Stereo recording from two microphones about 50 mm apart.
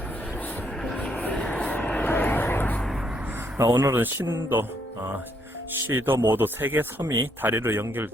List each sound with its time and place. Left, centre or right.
1.1 s vehicle: left
3.6 s speech: right
5.9 s speech: right